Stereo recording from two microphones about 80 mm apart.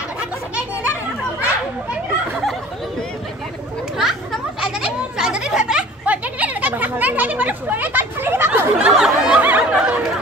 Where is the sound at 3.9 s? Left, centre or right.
Centre; by 8.7 s right.